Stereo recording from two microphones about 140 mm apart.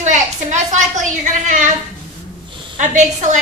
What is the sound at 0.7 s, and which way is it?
Speech, 60° right (ahead or behind).